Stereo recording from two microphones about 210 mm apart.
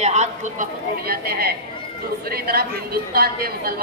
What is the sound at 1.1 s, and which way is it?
A woman's voice, 45° right (ahead or behind).